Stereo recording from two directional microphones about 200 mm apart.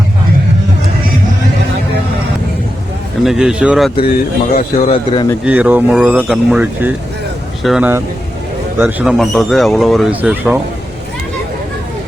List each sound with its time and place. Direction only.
3.2 s speech: 5° right (ahead or behind)
4.5 s a man's voice: 30° left (ahead or behind)
5.5 s speech: 5° right (ahead or behind)